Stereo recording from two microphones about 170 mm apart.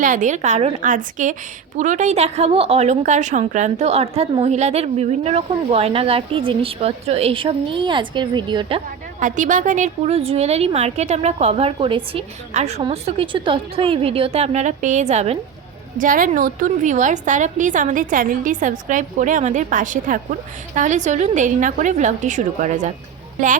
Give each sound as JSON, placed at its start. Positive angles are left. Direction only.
{"t": 0.0, "sound": "a woman's voice", "side_deg": -50}
{"t": 9.2, "sound": "a woman's voice", "side_deg": -50}
{"t": 16.0, "sound": "a woman's voice", "side_deg": -55}